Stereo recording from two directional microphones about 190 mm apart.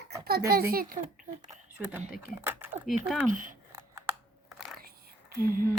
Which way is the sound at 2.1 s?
10° right (ahead or behind).